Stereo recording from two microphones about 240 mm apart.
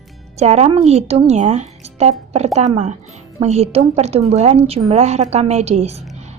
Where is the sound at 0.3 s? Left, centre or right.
Right.